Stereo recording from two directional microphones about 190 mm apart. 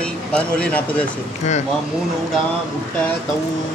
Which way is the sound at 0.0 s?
5° left (ahead or behind).